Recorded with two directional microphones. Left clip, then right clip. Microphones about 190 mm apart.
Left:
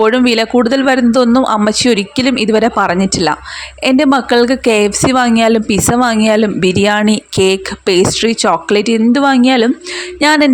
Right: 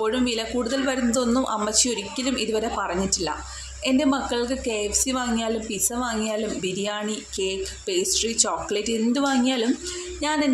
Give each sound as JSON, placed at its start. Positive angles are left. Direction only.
{"t": 0.0, "sound": "speech", "side_deg": 45}